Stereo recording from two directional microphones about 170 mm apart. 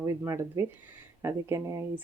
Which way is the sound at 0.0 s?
15° right (ahead or behind).